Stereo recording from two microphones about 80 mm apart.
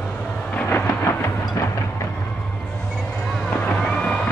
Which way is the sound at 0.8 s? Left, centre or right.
Left.